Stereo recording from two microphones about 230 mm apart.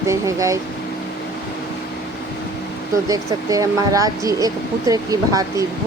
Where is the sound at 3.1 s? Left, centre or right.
Centre.